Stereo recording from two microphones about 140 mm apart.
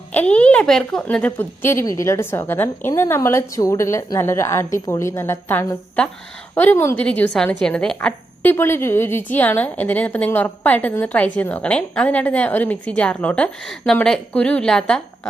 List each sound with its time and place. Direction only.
0.1 s speech: 10° left (ahead or behind)